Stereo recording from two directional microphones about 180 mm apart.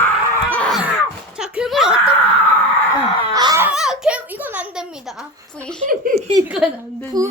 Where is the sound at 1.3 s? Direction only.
5° right (ahead or behind).